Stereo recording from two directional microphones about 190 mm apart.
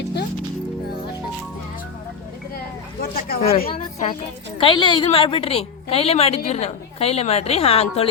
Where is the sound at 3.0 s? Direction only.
50° left (ahead or behind).